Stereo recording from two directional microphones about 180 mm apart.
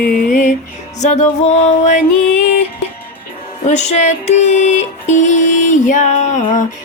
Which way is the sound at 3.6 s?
40° left (ahead or behind).